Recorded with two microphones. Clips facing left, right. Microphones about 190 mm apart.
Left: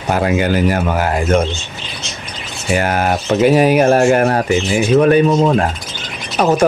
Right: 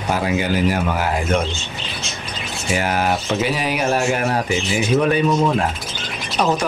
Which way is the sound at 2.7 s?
50° left (ahead or behind).